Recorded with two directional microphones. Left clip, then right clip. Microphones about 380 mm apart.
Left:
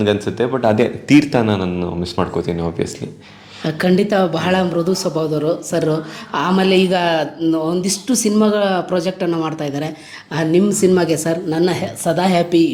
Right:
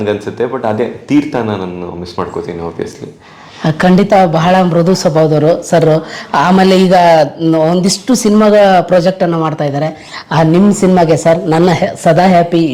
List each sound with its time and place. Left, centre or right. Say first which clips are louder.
0.0 s a man's voice: right 2 dB; left
3.6 s a man's voice: right 6 dB; right